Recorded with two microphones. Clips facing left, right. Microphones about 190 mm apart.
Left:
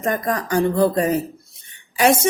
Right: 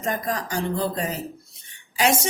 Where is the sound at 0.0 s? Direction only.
55° left (ahead or behind).